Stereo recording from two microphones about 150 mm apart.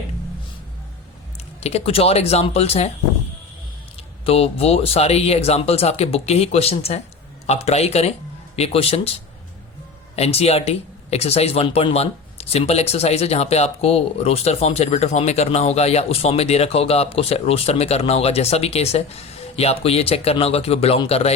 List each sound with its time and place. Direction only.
1.6 s speech: 40° left (ahead or behind)
4.3 s speech: 40° left (ahead or behind)